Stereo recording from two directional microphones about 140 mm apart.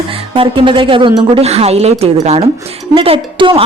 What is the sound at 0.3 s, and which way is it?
A woman's voice, 40° right (ahead or behind).